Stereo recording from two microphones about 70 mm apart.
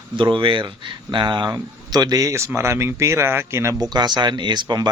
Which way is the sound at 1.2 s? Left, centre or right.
Right.